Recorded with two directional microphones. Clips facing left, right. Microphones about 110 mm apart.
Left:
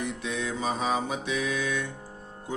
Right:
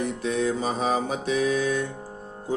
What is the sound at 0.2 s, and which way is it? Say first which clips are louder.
Music: right 6 dB; 40° right (ahead or behind).